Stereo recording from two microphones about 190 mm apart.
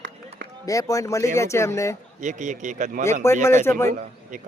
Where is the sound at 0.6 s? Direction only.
15° left (ahead or behind).